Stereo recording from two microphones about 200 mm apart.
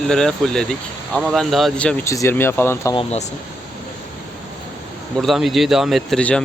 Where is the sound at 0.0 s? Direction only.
Centre (ahead or behind).